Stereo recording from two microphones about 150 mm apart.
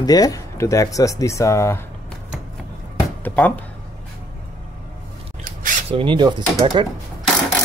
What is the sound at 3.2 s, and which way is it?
Speech, 10° left (ahead or behind).